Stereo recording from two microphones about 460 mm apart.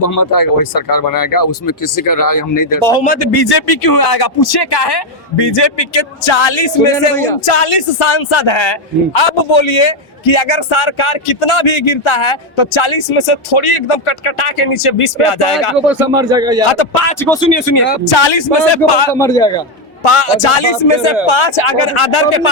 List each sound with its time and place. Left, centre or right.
0.0 s speech: left
2.8 s speech: centre
3.5 s speech: left
7.4 s a man's voice: left
15.9 s speech: centre
17.2 s speech: centre
18.1 s speech: left
19.1 s speech: centre
20.1 s a man's voice: left